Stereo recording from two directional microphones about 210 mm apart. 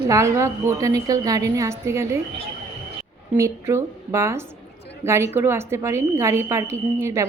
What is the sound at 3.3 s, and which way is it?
A woman's voice, 10° right (ahead or behind).